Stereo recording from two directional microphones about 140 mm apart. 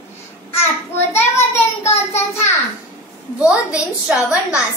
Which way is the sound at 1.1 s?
20° left (ahead or behind).